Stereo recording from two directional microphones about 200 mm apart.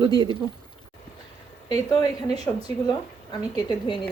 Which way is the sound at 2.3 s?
20° left (ahead or behind).